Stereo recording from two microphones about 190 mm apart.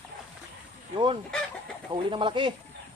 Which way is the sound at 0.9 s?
25° right (ahead or behind).